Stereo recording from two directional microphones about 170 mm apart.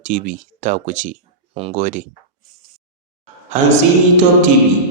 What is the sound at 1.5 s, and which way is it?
Speech, 35° right (ahead or behind).